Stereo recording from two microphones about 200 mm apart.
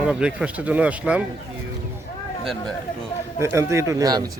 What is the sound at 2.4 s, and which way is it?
Speech, centre (ahead or behind).